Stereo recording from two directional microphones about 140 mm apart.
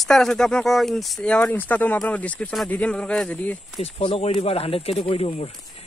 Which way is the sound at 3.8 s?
40° left (ahead or behind).